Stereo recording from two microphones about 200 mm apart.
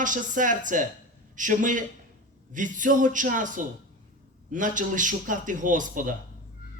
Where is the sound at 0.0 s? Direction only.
40° right (ahead or behind).